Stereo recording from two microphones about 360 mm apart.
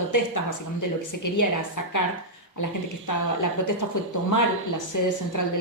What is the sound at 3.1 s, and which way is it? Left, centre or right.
A woman's voice, left.